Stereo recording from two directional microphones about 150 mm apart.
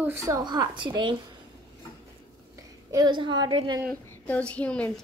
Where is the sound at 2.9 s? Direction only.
30° right (ahead or behind).